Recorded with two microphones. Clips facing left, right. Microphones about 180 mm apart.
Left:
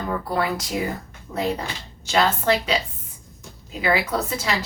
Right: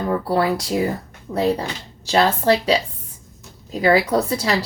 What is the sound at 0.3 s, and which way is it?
Speech, 35° right (ahead or behind).